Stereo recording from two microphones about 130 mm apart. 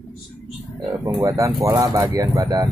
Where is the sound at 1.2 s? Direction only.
25° right (ahead or behind).